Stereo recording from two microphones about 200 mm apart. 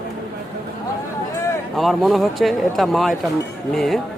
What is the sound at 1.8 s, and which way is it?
Speech, centre (ahead or behind).